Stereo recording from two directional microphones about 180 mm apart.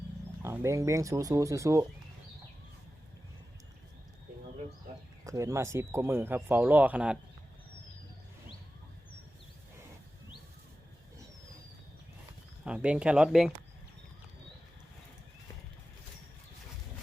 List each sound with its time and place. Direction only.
0.4 s speech: 15° right (ahead or behind)
5.2 s speech: 20° right (ahead or behind)
12.6 s speech: 5° right (ahead or behind)